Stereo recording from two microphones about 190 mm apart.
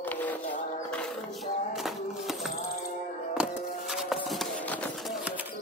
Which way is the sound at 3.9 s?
Centre (ahead or behind).